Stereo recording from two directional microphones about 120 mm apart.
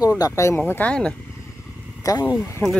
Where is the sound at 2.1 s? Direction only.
35° left (ahead or behind).